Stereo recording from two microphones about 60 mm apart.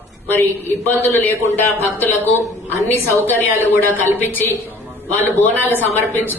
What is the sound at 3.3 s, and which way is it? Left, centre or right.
Speech, left.